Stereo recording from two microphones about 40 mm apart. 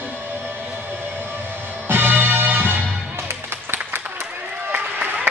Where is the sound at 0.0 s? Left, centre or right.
Right.